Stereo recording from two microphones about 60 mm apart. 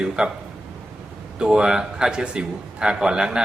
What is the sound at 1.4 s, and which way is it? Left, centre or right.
A man's voice, centre.